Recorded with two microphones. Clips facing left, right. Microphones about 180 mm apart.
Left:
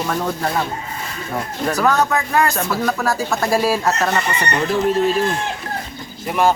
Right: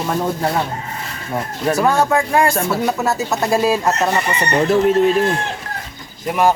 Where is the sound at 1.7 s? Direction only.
25° right (ahead or behind).